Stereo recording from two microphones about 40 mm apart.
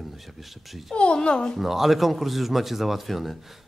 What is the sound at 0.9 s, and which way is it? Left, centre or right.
Speech, left.